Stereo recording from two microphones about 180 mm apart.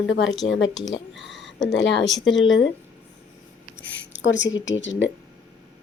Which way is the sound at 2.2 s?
90° left.